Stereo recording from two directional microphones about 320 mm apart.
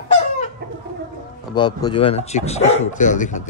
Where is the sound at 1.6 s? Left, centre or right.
Centre.